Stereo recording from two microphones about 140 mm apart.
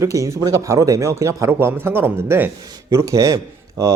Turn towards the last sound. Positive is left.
turn(degrees=-25)  # may be behind; listen again after turning